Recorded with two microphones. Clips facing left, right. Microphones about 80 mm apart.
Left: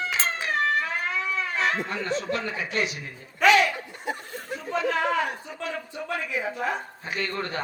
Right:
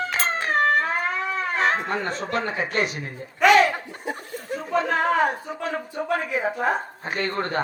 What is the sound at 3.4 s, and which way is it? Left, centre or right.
Laughter, right.